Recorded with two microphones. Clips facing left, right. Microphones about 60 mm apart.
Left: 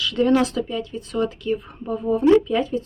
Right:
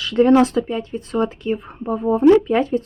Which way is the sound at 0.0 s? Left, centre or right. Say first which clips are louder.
Right 5 dB; right.